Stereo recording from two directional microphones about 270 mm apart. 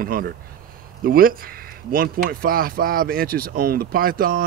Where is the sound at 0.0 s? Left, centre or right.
Right.